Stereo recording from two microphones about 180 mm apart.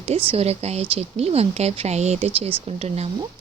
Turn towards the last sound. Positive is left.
turn(degrees=-35)  # may be behind; listen again after turning